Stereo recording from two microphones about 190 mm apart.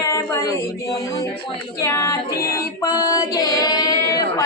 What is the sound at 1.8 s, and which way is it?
Female singing, 15° left (ahead or behind).